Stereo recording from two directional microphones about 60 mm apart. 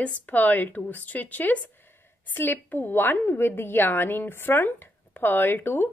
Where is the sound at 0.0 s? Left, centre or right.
Left.